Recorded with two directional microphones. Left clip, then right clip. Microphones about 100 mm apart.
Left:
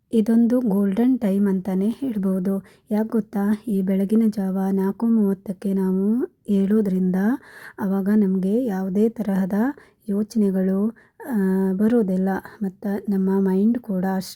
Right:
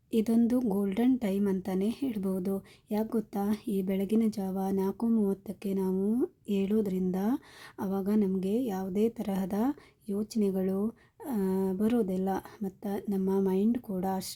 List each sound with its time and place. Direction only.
0.1 s a woman's voice: 35° left (ahead or behind)
5.0 s speech: 25° left (ahead or behind)
5.3 s a woman's voice: 40° left (ahead or behind)
6.5 s a woman's voice: 45° left (ahead or behind)